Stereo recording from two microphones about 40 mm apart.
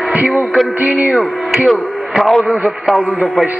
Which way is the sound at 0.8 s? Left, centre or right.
Right.